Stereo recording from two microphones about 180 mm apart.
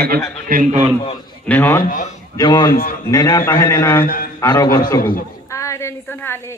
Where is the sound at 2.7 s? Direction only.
55° left (ahead or behind).